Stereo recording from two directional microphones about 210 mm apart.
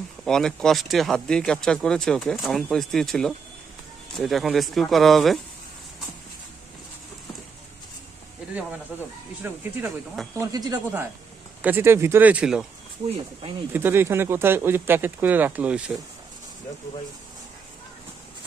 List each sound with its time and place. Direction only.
0.2 s speech: 5° left (ahead or behind)
9.4 s speech: 10° right (ahead or behind)
13.7 s speech: 10° right (ahead or behind)